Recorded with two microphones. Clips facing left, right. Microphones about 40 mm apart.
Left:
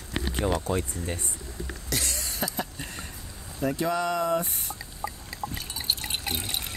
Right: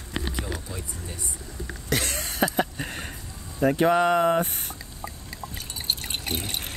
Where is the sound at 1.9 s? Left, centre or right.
Right.